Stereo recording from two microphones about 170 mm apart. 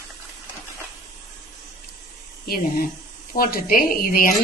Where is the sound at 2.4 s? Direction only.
65° left (ahead or behind).